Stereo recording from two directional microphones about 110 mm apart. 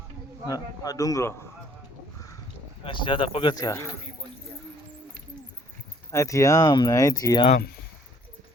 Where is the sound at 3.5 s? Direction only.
35° left (ahead or behind).